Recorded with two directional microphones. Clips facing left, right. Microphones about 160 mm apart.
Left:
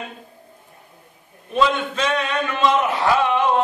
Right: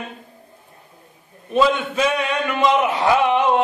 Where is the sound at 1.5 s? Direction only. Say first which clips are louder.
Right 2 dB; 5° right (ahead or behind).